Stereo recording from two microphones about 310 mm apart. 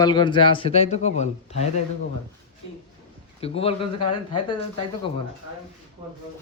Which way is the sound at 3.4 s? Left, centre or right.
Centre.